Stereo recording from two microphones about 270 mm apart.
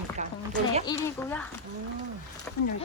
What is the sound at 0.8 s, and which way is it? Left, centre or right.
Speech, centre.